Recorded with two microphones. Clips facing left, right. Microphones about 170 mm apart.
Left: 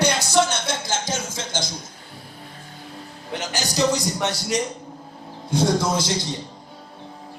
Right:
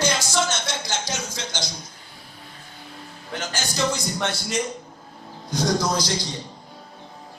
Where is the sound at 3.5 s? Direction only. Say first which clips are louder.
Left 4 dB; 40° left (ahead or behind).